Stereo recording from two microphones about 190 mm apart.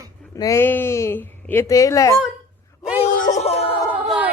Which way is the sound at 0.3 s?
15° left (ahead or behind).